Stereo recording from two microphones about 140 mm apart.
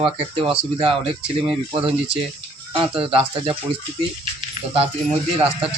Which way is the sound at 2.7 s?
40° right (ahead or behind).